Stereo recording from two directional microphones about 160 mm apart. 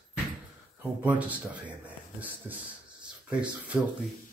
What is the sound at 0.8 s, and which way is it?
Speech, 10° right (ahead or behind).